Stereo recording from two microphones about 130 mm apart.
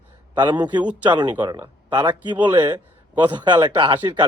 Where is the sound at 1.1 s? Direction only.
35° right (ahead or behind).